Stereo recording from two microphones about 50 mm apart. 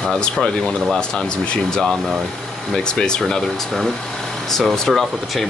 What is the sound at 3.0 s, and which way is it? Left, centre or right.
Speech, centre.